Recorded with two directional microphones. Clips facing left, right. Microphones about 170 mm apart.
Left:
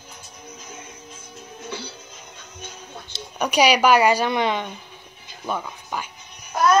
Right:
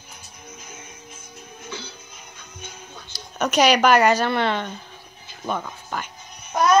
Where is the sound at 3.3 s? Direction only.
10° left (ahead or behind).